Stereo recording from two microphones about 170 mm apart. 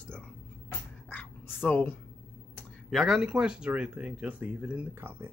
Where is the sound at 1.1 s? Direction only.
10° left (ahead or behind).